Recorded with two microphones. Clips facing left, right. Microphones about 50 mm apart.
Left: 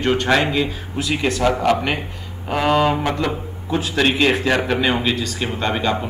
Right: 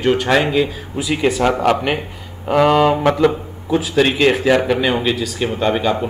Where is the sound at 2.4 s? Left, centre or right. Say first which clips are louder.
Right 4 dB; centre.